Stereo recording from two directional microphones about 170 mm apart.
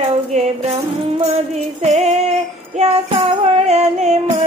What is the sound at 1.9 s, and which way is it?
Female singing, 40° right (ahead or behind).